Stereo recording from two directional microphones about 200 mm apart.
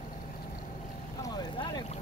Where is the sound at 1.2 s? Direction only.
20° left (ahead or behind).